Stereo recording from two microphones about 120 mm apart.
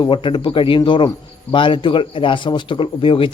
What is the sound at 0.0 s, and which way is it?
Speech, 40° left (ahead or behind).